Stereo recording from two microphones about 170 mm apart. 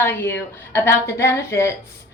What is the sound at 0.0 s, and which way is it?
A woman's voice, 15° left (ahead or behind).